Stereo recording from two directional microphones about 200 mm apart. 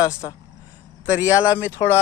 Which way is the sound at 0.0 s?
15° left (ahead or behind).